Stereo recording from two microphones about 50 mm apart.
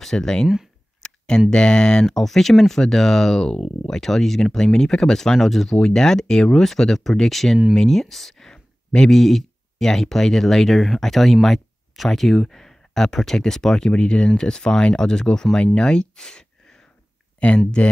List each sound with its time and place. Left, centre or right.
0.0 s speech: centre
1.0 s a sound: centre
1.5 s speech: centre
2.0 s speech: centre
17.4 s speech: left